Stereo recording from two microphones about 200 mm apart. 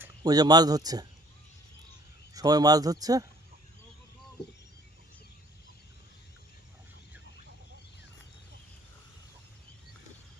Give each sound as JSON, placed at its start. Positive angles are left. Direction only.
{"t": 0.2, "sound": "speech", "side_deg": -20}
{"t": 2.3, "sound": "speech", "side_deg": -20}